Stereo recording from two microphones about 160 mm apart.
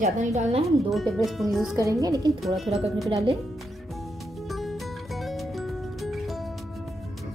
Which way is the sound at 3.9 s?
Centre (ahead or behind).